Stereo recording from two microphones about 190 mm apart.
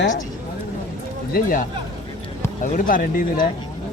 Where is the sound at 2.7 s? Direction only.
45° left (ahead or behind).